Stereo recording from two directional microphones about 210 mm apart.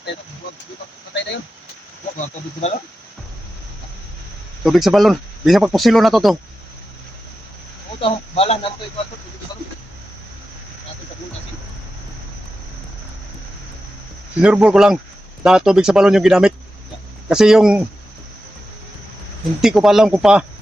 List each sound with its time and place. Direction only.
2.1 s speech: 30° left (ahead or behind)
4.6 s speech: centre (ahead or behind)
8.0 s speech: 30° left (ahead or behind)
14.4 s speech: 5° right (ahead or behind)
19.6 s speech: centre (ahead or behind)